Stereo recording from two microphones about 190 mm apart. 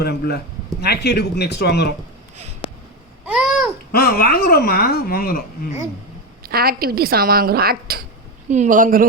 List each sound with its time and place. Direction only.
0.0 s speech: 55° left (ahead or behind)
2.6 s a sound: 30° left (ahead or behind)
3.2 s babbling: 5° right (ahead or behind)
3.9 s speech: 50° left (ahead or behind)
6.4 s speech: 55° right (ahead or behind)
8.4 s speech: 40° right (ahead or behind)